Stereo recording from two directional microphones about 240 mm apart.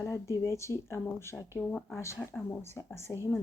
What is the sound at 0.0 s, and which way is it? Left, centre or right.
Speech, centre.